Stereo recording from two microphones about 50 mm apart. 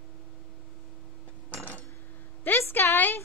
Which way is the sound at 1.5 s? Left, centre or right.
Left.